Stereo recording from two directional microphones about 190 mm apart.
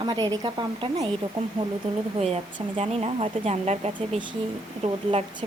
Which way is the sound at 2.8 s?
35° right (ahead or behind).